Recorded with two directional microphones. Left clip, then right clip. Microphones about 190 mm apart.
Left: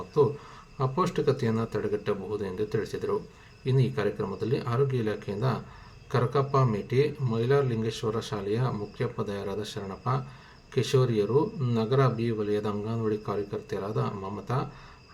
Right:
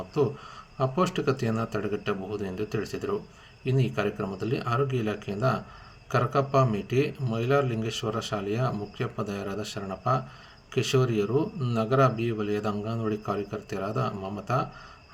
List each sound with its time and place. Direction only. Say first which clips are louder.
0.8 s speech: right 1 dB; 15° right (ahead or behind)